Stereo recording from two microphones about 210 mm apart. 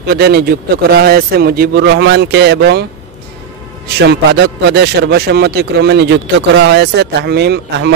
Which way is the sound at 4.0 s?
55° right (ahead or behind).